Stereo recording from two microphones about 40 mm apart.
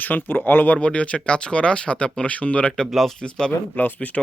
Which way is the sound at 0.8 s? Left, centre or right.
Left.